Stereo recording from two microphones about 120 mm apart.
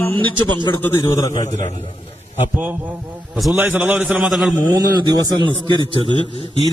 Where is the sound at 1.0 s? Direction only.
30° left (ahead or behind).